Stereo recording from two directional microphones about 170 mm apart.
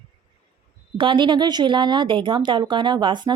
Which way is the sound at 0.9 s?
30° right (ahead or behind).